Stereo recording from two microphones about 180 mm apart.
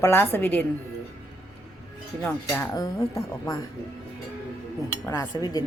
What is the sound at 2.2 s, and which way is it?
Speech, 5° left (ahead or behind).